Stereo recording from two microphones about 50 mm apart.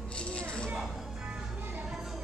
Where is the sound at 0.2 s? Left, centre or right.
Left.